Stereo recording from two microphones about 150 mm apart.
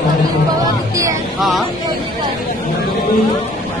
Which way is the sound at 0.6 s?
20° right (ahead or behind).